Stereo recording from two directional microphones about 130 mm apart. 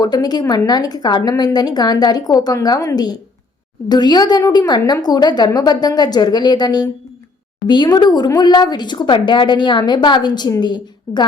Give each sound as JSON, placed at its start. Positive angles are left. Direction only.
{"t": 0.0, "sound": "speech", "side_deg": 30}